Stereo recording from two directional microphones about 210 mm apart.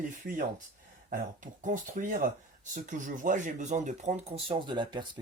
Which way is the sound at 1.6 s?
40° right (ahead or behind).